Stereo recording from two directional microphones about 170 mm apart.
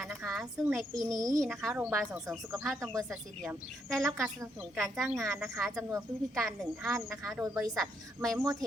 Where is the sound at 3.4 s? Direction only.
Centre (ahead or behind).